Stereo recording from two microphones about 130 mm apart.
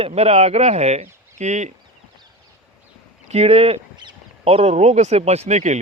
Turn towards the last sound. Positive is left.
turn(degrees=-60)  # may be behind; listen again after turning